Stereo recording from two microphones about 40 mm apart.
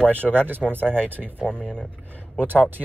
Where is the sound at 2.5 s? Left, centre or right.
Right.